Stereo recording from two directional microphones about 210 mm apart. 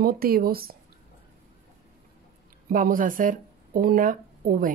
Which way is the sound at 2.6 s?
40° right (ahead or behind).